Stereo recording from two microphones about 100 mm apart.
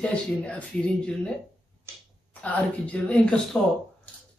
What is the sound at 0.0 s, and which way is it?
Speech, 10° left (ahead or behind).